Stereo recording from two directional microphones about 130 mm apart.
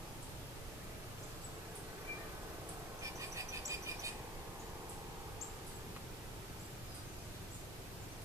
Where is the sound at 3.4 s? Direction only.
25° right (ahead or behind).